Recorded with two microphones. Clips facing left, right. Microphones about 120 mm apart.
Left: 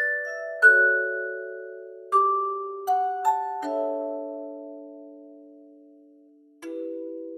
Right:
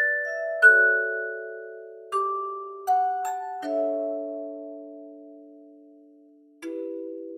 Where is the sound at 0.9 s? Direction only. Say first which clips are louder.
Even; centre (ahead or behind).